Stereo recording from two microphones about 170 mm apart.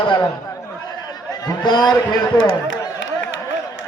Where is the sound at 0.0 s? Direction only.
25° left (ahead or behind).